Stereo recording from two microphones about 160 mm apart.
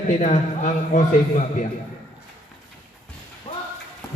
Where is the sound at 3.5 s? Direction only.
35° left (ahead or behind).